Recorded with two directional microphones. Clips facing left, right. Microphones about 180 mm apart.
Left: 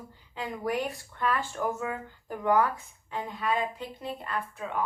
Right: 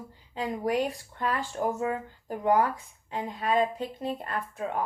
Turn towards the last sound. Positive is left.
turn(degrees=-40)  # may be behind; listen again after turning